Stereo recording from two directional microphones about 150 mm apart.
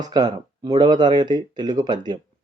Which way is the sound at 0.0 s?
25° right (ahead or behind).